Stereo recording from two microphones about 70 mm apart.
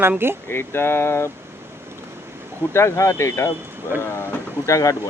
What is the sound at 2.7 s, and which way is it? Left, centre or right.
Speech, left.